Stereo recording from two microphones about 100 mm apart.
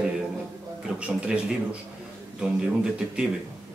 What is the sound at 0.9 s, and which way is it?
Speech, 10° right (ahead or behind).